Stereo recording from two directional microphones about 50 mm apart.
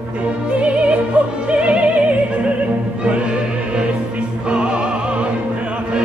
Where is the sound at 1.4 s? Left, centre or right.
Right.